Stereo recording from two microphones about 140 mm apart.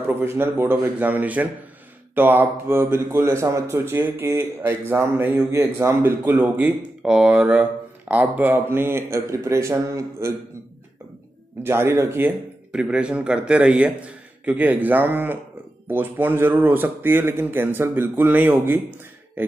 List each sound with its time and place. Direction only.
0.0 s a man's voice: 15° right (ahead or behind)
11.6 s a man's voice: 15° right (ahead or behind)